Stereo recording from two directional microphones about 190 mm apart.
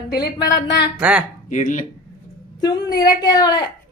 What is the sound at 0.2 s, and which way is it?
Child singing, 20° left (ahead or behind).